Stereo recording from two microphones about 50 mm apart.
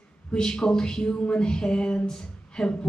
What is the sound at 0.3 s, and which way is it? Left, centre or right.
Speech, centre.